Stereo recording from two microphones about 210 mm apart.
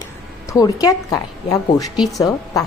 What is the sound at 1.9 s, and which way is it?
Speech, centre (ahead or behind).